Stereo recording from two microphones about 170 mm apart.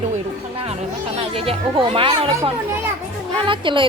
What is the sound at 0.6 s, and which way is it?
Music, 35° right (ahead or behind).